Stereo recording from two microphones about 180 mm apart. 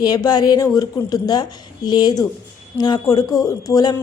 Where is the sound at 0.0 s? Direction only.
20° left (ahead or behind).